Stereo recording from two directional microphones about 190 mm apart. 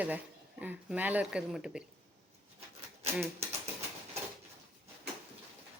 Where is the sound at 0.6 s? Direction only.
10° right (ahead or behind).